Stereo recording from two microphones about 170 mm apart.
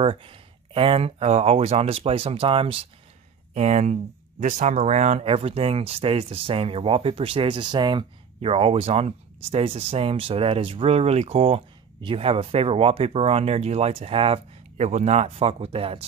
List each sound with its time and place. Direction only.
0.0 s speech: 30° right (ahead or behind)